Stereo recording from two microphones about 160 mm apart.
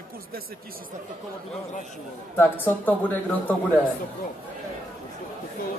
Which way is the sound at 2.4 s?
10° left (ahead or behind).